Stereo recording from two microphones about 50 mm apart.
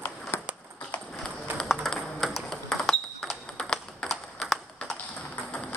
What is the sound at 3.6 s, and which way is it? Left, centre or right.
Typing, centre.